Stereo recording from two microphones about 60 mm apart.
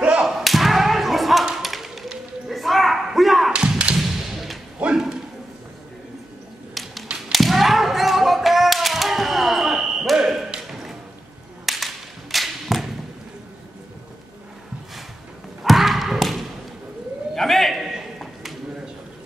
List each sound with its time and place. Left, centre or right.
0.4 s thump: centre
3.5 s thump: centre
4.0 s thump: centre
4.9 s a sound: centre
6.7 s bird: centre
7.3 s tap: centre
11.6 s a sound: centre
15.6 s bouncing: centre
17.4 s a sound: centre